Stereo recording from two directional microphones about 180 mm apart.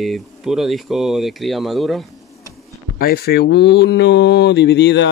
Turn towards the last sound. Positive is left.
turn(degrees=70)  # may be behind; listen again after turning